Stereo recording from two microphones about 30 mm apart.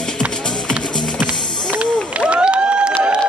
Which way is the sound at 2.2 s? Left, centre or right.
Right.